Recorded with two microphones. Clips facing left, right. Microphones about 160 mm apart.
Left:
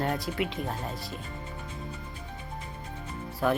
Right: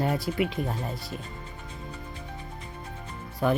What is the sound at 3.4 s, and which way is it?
Speech, centre (ahead or behind).